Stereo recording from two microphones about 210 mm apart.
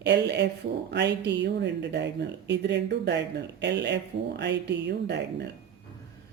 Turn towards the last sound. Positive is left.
turn(degrees=-55)  # may be behind; listen again after turning